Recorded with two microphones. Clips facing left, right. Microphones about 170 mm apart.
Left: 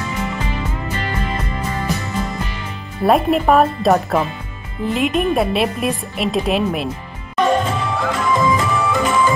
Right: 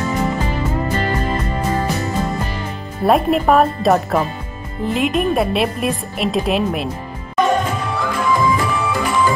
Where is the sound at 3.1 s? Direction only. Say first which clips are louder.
Even; centre (ahead or behind).